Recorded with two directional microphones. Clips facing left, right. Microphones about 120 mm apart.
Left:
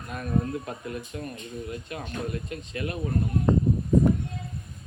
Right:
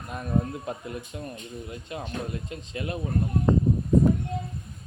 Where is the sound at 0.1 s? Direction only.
20° right (ahead or behind).